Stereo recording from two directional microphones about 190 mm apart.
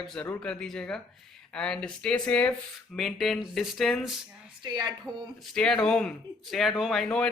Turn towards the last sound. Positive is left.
turn(degrees=5)  # may be behind; listen again after turning